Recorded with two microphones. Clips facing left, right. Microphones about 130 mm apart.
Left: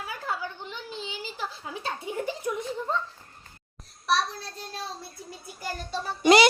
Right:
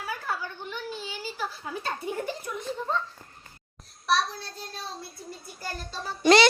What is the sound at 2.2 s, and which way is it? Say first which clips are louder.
Speech: left 3 dB; 15° left (ahead or behind).